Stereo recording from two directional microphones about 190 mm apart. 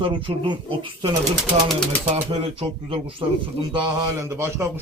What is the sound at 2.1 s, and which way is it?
A man's voice, 30° right (ahead or behind).